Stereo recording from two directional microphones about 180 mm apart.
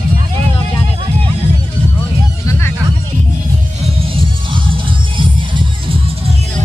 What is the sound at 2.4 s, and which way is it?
Music, 15° left (ahead or behind).